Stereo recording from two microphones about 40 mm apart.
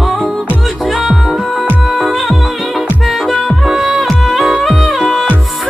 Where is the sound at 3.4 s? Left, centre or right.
Right.